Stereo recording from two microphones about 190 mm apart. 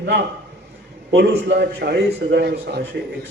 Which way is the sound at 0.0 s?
65° right (ahead or behind).